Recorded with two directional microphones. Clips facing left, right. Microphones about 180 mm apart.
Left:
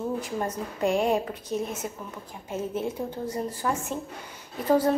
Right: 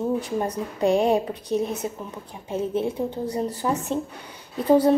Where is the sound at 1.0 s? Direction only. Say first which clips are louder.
Right 4 dB; 35° right (ahead or behind).